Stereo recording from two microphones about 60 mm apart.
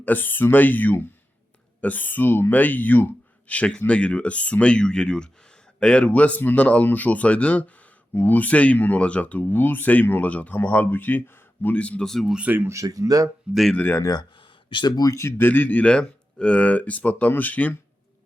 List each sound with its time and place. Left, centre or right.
0.0 s speech: left
10.6 s speech: left
12.0 s speech: centre
12.6 s speech: right
13.5 s speech: centre
14.0 s speech: left
15.4 s speech: left